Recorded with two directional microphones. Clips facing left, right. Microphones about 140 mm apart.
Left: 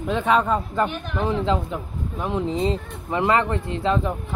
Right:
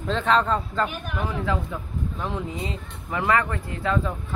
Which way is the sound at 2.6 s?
30° left (ahead or behind).